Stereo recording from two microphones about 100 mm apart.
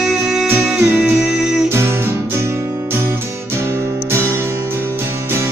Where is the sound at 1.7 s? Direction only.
25° right (ahead or behind).